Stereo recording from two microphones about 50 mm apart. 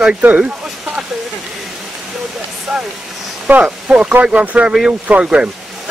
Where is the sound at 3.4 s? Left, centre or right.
Right.